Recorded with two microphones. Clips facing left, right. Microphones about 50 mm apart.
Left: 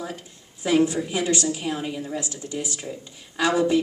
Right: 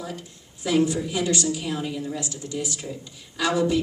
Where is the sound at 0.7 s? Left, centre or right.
Left.